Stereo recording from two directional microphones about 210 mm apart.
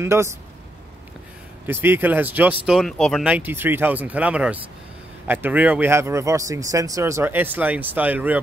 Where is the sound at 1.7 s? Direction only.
10° right (ahead or behind).